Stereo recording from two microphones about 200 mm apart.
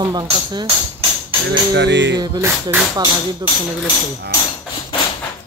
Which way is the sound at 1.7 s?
60° right (ahead or behind).